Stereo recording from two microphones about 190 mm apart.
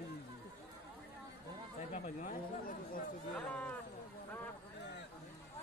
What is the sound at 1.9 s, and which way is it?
Speech, 45° left (ahead or behind).